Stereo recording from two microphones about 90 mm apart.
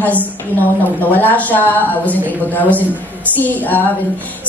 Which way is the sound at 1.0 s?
20° left (ahead or behind).